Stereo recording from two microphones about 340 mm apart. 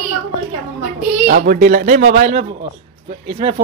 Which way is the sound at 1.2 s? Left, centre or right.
Right.